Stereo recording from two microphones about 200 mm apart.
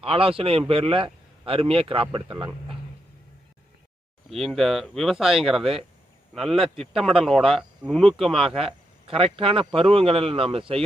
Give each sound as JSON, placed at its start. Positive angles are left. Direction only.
{"t": 0.0, "sound": "speech", "side_deg": -30}
{"t": 4.3, "sound": "speech", "side_deg": 0}
{"t": 8.4, "sound": "speech", "side_deg": -30}